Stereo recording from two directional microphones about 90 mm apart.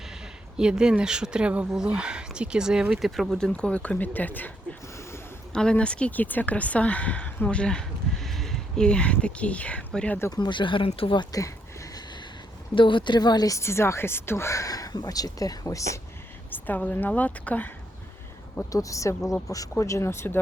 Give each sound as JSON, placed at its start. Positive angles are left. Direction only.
{"t": 0.5, "sound": "speech", "side_deg": -10}
{"t": 5.5, "sound": "speech", "side_deg": 10}
{"t": 10.3, "sound": "speech", "side_deg": 55}
{"t": 11.2, "sound": "a sound", "side_deg": 40}
{"t": 12.7, "sound": "speech", "side_deg": 65}
{"t": 13.6, "sound": "speech", "side_deg": 30}
{"t": 16.5, "sound": "a woman's voice", "side_deg": 20}
{"t": 18.7, "sound": "speech", "side_deg": 40}